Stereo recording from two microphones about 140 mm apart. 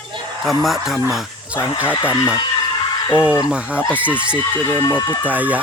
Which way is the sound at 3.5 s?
10° right (ahead or behind).